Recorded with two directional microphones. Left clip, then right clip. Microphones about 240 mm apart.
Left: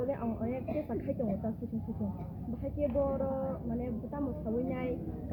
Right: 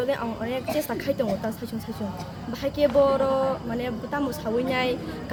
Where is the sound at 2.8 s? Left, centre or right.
Right.